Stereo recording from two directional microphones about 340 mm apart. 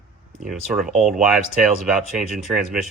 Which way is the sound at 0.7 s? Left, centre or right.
Centre.